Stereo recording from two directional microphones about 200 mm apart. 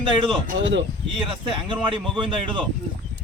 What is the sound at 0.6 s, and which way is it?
Speech, 65° right (ahead or behind).